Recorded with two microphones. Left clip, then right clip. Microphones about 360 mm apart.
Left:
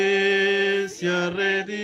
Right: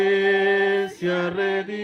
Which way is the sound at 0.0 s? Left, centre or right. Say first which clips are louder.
Right 1 dB; centre.